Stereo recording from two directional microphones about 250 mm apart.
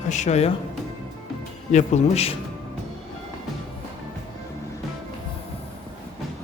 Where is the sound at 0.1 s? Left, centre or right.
Left.